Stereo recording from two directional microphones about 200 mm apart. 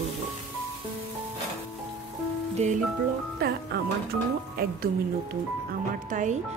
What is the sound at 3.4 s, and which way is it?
Speech, 50° right (ahead or behind).